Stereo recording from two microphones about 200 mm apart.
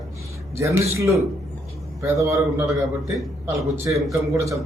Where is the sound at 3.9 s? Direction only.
15° right (ahead or behind).